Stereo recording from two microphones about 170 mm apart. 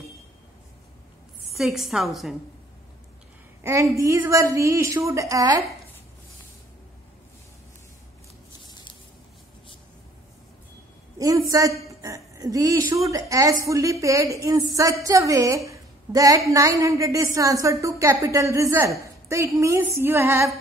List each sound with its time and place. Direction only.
1.5 s a woman's voice: centre (ahead or behind)
3.9 s a woman's voice: 20° right (ahead or behind)
11.1 s a woman's voice: 20° right (ahead or behind)